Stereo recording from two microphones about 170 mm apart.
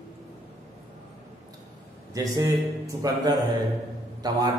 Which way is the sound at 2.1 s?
20° right (ahead or behind).